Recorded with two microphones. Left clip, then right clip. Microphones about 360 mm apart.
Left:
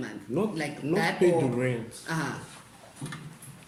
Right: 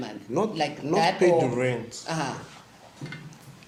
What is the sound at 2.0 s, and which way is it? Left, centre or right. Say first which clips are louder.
Speech: right 2 dB; centre.